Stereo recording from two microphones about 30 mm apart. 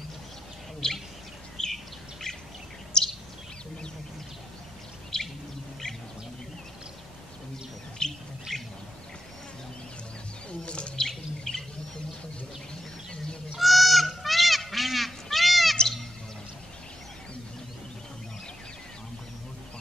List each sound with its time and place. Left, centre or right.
0.8 s bird: left
2.3 s bird vocalization: left
2.9 s a sound: left
5.1 s bird vocalization: left
8.0 s bird: left
10.6 s chirp: left
11.0 s bird: centre
13.6 s goose: centre